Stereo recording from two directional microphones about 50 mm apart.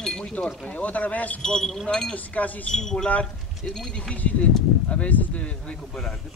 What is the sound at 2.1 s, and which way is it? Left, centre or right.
Speech, left.